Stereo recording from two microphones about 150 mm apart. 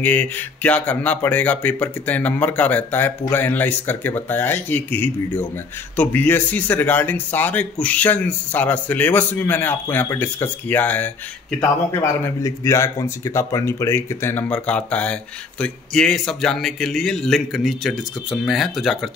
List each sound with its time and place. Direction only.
0.0 s a man's voice: 10° left (ahead or behind)